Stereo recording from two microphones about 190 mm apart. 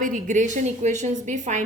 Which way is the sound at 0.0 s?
45° right (ahead or behind).